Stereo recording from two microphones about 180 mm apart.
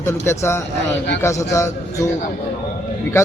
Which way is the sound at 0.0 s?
15° left (ahead or behind).